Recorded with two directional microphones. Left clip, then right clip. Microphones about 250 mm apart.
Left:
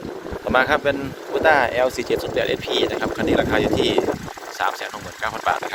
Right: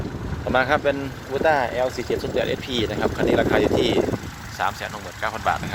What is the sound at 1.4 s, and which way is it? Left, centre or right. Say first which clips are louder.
Speech: left 4 dB; centre.